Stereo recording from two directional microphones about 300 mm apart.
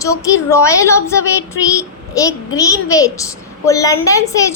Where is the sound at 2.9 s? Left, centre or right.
Centre.